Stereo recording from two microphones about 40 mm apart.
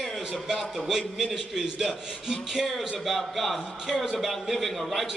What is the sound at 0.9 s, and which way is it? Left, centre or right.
A man's voice, centre.